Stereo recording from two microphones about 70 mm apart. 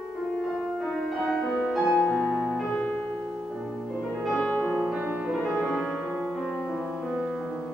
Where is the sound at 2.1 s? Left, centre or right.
Centre.